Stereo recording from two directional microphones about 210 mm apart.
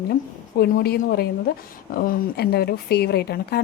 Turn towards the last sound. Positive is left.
turn(degrees=50)  # may be behind; listen again after turning